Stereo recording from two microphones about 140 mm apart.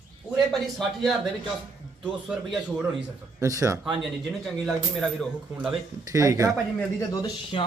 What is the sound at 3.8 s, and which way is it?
Speech, 5° right (ahead or behind).